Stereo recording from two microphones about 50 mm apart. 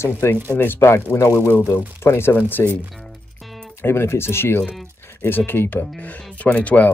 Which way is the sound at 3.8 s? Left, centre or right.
Left.